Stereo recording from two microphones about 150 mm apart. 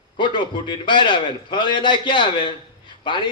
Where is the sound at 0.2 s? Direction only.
30° left (ahead or behind).